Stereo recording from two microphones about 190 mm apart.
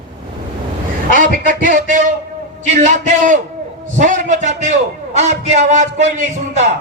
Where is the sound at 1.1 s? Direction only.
45° right (ahead or behind).